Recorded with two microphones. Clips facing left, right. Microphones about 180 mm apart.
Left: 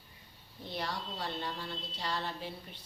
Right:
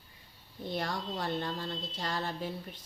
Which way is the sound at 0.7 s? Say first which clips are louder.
Right 4 dB; 50° right (ahead or behind).